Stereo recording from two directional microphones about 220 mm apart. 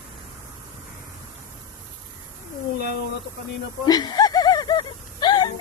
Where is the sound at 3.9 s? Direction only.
15° left (ahead or behind).